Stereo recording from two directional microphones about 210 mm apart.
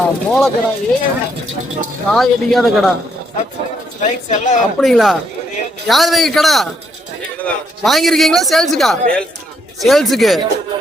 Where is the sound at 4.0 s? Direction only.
35° left (ahead or behind).